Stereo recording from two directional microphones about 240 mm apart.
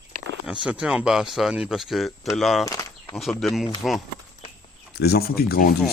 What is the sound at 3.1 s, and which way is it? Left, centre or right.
Speech, centre.